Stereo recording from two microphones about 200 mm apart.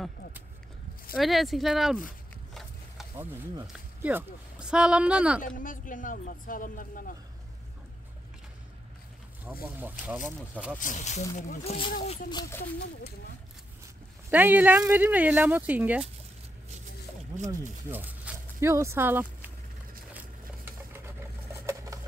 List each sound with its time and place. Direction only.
1.1 s speech: centre (ahead or behind)
3.6 s speech: 5° right (ahead or behind)
5.6 s speech: 40° left (ahead or behind)
9.8 s speech: 10° right (ahead or behind)
10.8 s speech: 35° left (ahead or behind); by 12.6 s 15° left (ahead or behind)
14.3 s speech: 10° right (ahead or behind)
17.8 s a sound: 10° right (ahead or behind)
21.6 s sewing machine: 15° right (ahead or behind)